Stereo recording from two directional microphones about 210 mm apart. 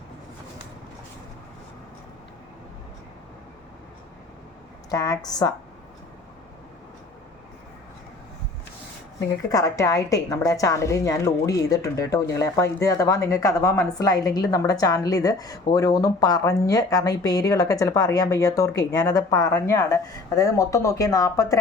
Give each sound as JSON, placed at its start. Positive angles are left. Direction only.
{"t": 4.9, "sound": "a woman's voice", "side_deg": 15}
{"t": 9.5, "sound": "a woman's voice", "side_deg": 15}